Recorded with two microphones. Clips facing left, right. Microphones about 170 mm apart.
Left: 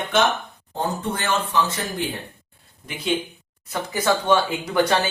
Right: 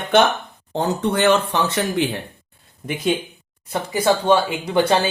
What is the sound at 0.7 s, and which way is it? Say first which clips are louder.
Speech: right 6 dB; 70° right (ahead or behind).